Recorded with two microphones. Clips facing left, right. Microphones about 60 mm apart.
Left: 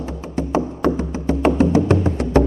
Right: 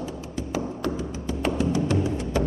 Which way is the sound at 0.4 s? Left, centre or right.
Left.